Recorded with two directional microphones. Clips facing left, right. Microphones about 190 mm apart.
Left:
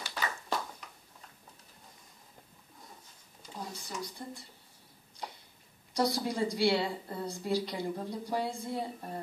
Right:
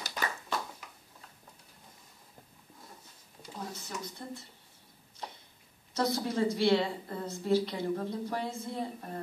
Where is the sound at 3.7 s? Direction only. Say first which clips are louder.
Even; 15° left (ahead or behind).